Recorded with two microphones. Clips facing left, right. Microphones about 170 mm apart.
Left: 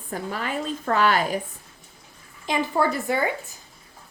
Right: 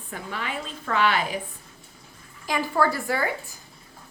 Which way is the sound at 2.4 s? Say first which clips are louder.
Left 1 dB; 20° left (ahead or behind).